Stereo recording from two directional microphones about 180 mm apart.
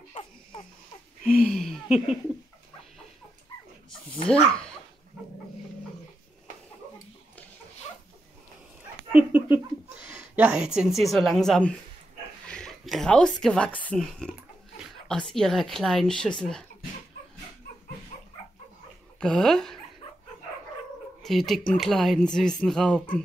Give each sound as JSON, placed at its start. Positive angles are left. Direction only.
{"t": 0.1, "sound": "baby laughter", "side_deg": 30}
{"t": 1.2, "sound": "speech", "side_deg": 5}
{"t": 4.3, "sound": "speech", "side_deg": 5}
{"t": 9.1, "sound": "speech", "side_deg": -10}
{"t": 19.1, "sound": "speech", "side_deg": 5}
{"t": 21.2, "sound": "speech", "side_deg": 0}